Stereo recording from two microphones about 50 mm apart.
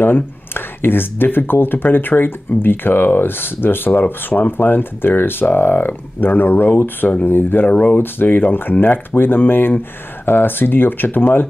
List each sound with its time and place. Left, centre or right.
0.0 s speech: left